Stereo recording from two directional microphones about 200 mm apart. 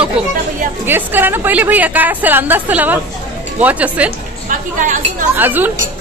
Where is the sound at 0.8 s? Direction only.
10° right (ahead or behind).